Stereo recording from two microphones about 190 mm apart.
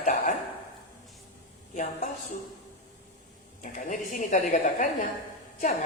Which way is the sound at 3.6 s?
45° left (ahead or behind).